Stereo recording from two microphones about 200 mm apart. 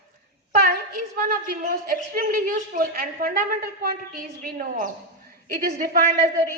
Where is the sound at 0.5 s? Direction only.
45° right (ahead or behind).